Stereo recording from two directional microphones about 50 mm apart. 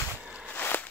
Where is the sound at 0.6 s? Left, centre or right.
Left.